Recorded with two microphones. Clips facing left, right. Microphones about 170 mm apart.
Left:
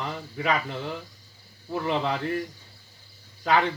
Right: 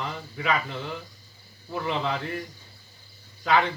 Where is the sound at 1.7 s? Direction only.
40° left (ahead or behind).